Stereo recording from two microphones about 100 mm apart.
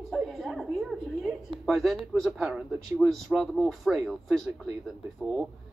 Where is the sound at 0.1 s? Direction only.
Centre (ahead or behind).